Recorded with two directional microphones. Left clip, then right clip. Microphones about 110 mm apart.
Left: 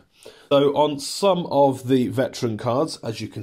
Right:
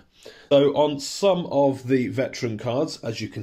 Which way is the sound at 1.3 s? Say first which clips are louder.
Left 3 dB; 55° left (ahead or behind).